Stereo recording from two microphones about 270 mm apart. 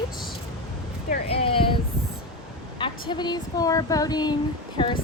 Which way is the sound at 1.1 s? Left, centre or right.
Left.